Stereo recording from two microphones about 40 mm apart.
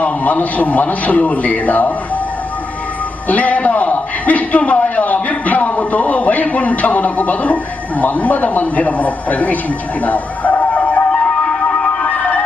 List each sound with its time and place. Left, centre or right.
0.0 s a man's voice: left
3.2 s a man's voice: left
10.0 s music: left
12.0 s music: left